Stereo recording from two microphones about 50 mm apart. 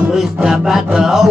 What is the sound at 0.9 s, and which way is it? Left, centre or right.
Mantra, centre.